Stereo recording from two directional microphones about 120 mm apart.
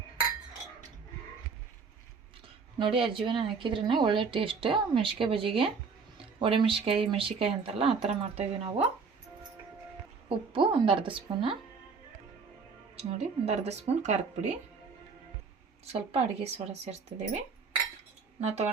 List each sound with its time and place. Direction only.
2.7 s speech: 45° right (ahead or behind)
10.2 s speech: 45° right (ahead or behind)
13.0 s a woman's voice: 60° right (ahead or behind)
15.9 s a woman's voice: 55° right (ahead or behind)
18.3 s speech: 65° right (ahead or behind)